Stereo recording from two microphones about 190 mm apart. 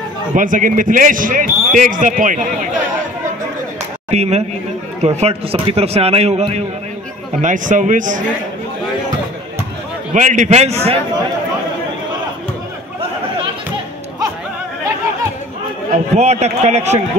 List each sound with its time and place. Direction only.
0.3 s speech: 45° right (ahead or behind)
4.1 s a man's voice: 35° right (ahead or behind)
10.1 s a man's voice: 40° right (ahead or behind)
15.9 s a man's voice: 35° right (ahead or behind)